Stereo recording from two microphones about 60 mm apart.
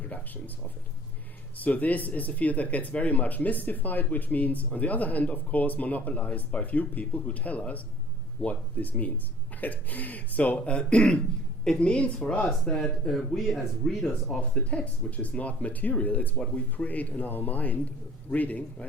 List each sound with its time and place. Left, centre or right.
1.5 s speech: left; by 12.8 s centre
13.1 s speech: centre
14.7 s speech: left